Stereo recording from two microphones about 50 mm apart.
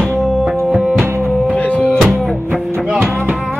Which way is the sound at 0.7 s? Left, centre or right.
Centre.